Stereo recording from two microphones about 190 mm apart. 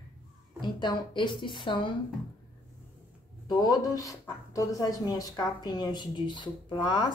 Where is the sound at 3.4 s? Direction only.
20° left (ahead or behind).